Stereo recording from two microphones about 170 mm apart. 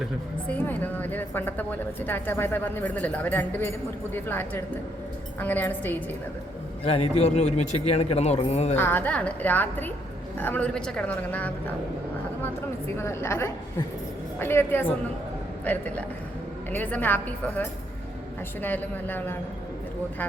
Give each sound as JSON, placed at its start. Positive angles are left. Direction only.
{"t": 0.4, "sound": "a woman's voice", "side_deg": 10}
{"t": 6.8, "sound": "speech", "side_deg": 35}
{"t": 8.7, "sound": "a woman's voice", "side_deg": 10}
{"t": 13.0, "sound": "a woman's voice", "side_deg": 15}